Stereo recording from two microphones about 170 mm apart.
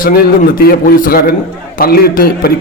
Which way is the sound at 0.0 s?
60° left (ahead or behind).